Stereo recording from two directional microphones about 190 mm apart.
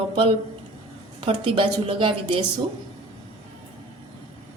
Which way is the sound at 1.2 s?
30° right (ahead or behind).